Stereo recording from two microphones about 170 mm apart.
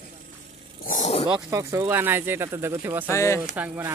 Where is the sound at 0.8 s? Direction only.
50° left (ahead or behind).